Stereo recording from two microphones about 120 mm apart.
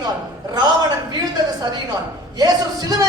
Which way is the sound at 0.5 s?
35° right (ahead or behind).